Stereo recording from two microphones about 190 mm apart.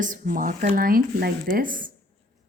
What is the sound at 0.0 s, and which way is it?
Speech, 45° right (ahead or behind).